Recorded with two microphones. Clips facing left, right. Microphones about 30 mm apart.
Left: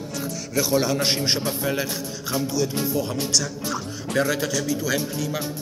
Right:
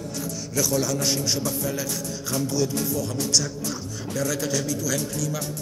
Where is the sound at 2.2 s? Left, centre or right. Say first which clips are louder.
Left 2 dB; left.